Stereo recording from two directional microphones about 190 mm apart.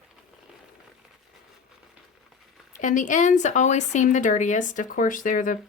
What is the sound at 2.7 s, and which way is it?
Speech, 45° left (ahead or behind).